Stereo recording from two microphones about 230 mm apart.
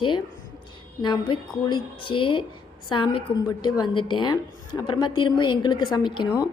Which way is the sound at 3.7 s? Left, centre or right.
Centre.